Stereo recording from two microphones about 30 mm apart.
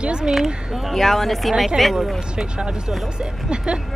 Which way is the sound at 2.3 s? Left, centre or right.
Right.